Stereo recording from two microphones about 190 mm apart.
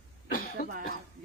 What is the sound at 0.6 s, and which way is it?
Speech, 45° left (ahead or behind).